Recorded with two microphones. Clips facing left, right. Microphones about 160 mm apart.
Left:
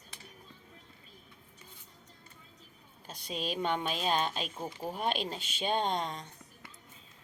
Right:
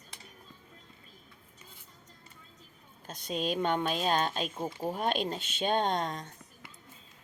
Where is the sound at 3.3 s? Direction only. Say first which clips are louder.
Right 3 dB; 45° right (ahead or behind).